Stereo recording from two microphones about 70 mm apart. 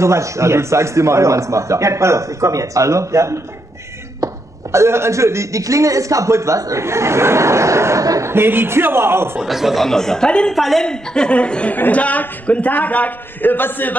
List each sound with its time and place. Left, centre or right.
0.0 s speech: right
4.2 s a sound: right
4.7 s speech: right
8.3 s a man's voice: right
9.4 s speech: centre
9.8 s speech: centre
10.5 s a woman's voice: centre; by 13.9 s left